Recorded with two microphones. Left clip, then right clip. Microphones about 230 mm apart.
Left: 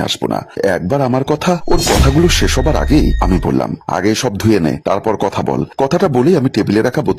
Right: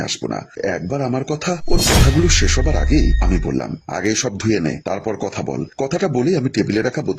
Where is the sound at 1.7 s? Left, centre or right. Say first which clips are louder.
Left 2 dB; centre.